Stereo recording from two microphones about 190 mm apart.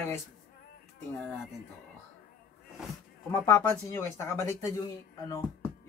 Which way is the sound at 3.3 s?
15° left (ahead or behind).